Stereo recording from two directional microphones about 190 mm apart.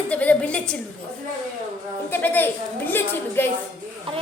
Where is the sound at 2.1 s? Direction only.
10° left (ahead or behind).